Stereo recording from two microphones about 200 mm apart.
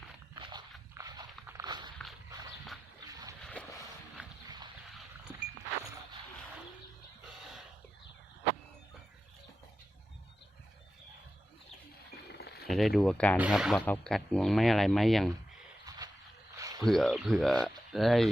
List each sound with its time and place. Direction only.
0.9 s a sound: 20° right (ahead or behind)
1.5 s walk: 20° right (ahead or behind)
3.4 s boat: 5° left (ahead or behind)
4.4 s dog: 20° right (ahead or behind)
7.3 s a sound: centre (ahead or behind)
12.3 s cutlery: 55° left (ahead or behind)
12.6 s speech: centre (ahead or behind)
15.9 s a sound: 20° right (ahead or behind)
16.8 s speech: centre (ahead or behind)